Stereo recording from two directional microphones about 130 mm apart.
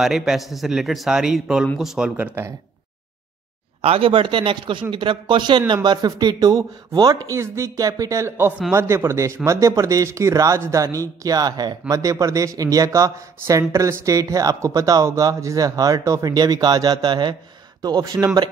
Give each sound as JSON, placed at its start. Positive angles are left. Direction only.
{"t": 0.0, "sound": "a man's voice", "side_deg": -5}
{"t": 3.8, "sound": "a man's voice", "side_deg": -45}